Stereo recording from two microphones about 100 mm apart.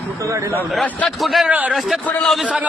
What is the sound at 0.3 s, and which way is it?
Speech, 30° right (ahead or behind).